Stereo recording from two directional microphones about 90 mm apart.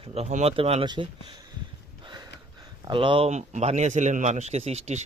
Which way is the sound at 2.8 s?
65° right (ahead or behind).